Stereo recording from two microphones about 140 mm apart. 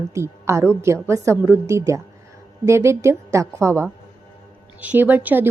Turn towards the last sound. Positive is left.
turn(degrees=-15)  # may be behind; listen again after turning